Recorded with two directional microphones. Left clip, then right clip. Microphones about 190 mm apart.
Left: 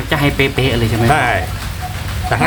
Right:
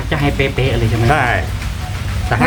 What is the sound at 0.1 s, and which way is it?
Speech, 65° left (ahead or behind).